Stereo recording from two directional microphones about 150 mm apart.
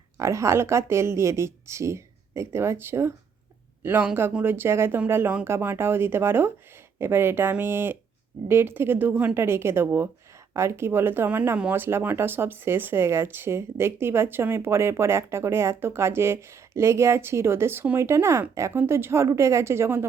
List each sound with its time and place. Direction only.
0.2 s a woman's voice: 20° right (ahead or behind)